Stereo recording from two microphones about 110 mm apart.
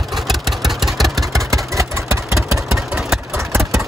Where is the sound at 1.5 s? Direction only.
25° right (ahead or behind).